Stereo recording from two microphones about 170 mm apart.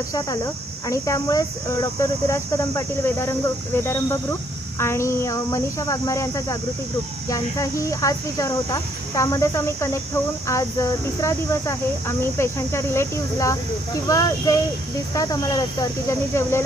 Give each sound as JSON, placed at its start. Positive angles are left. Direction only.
{"t": 0.8, "sound": "speech", "side_deg": 20}